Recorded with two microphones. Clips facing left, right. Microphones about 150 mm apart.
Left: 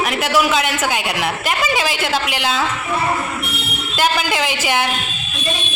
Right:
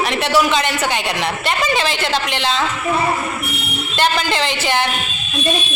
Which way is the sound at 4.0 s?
10° left (ahead or behind).